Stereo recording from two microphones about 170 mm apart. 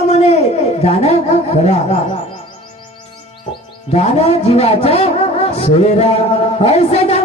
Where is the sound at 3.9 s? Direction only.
40° left (ahead or behind).